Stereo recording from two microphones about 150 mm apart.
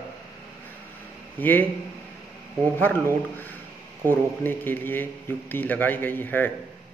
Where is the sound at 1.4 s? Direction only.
10° left (ahead or behind).